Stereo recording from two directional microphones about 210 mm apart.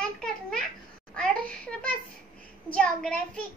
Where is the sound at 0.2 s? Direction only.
5° left (ahead or behind).